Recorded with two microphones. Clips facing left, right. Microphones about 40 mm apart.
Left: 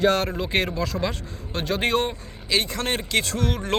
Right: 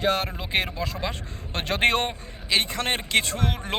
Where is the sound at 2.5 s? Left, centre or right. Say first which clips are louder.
Even; right.